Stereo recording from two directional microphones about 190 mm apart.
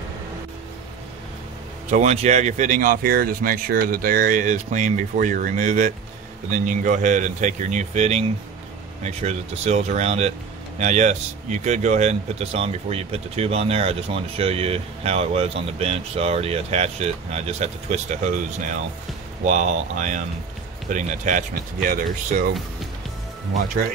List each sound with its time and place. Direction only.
1.9 s speech: 40° right (ahead or behind)